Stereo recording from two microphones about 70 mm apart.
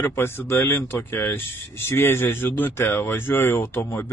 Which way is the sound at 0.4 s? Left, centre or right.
Left.